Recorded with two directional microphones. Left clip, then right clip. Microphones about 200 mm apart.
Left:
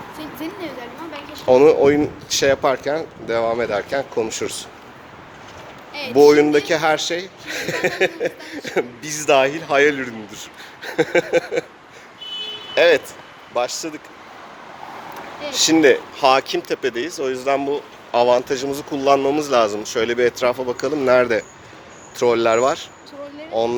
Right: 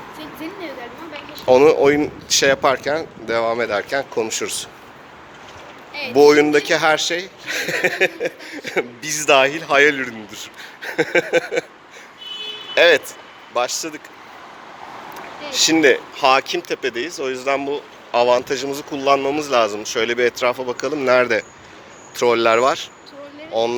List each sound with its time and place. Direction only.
0.2 s a sound: 60° left (ahead or behind)
1.5 s speech: centre (ahead or behind)
5.9 s a sound: 60° left (ahead or behind)
6.1 s speech: centre (ahead or behind)
12.7 s speech: centre (ahead or behind)
15.4 s speech: 10° left (ahead or behind)